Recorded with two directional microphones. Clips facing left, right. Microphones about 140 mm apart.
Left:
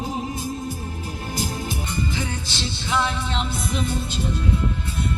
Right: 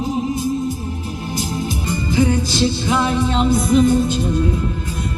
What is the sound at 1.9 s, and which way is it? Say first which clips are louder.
Music: right 14 dB; 45° right (ahead or behind).